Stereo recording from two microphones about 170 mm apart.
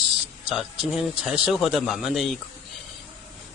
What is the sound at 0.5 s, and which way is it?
Speech, centre (ahead or behind).